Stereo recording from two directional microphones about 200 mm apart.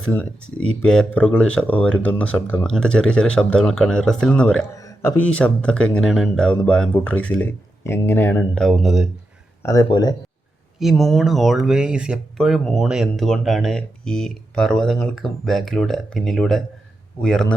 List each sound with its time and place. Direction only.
0.7 s speech: 5° left (ahead or behind)
9.6 s speech: 20° left (ahead or behind)
10.8 s speech: centre (ahead or behind)